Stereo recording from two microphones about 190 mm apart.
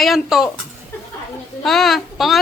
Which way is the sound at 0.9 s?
10° left (ahead or behind).